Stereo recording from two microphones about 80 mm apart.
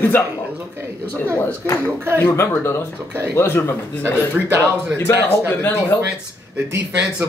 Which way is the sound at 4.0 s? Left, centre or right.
Right.